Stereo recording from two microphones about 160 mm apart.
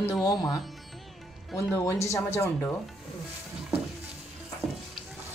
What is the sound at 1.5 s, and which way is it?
Speech, 20° left (ahead or behind).